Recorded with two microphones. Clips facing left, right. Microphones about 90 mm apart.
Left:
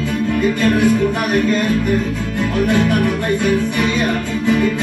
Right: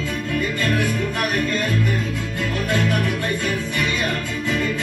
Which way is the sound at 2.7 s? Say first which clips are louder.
Left 5 dB; 20° left (ahead or behind).